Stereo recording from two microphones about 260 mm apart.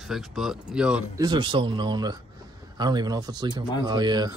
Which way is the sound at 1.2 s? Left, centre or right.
Centre.